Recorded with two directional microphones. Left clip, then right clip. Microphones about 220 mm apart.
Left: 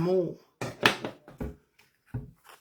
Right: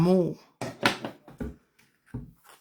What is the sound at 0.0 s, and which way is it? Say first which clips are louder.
Speech: right 3 dB; 45° right (ahead or behind).